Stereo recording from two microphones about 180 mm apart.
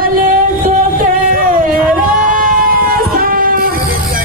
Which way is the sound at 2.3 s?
55° right (ahead or behind).